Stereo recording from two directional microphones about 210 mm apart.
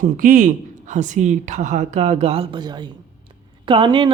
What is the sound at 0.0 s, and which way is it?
Speech, 40° right (ahead or behind).